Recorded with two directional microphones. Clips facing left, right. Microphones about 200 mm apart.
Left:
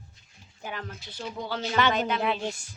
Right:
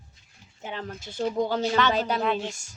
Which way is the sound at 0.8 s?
50° right (ahead or behind).